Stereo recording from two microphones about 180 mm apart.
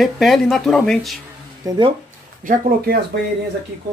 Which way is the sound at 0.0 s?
Centre (ahead or behind).